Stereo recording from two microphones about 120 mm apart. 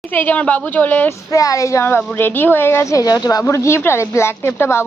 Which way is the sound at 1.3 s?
30° left (ahead or behind).